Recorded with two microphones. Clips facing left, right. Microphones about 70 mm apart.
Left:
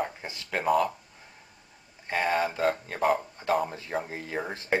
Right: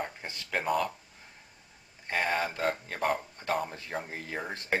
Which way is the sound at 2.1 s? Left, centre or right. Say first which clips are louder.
Left 3 dB; centre.